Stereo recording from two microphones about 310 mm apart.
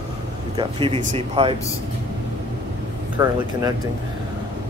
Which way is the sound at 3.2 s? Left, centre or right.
Centre.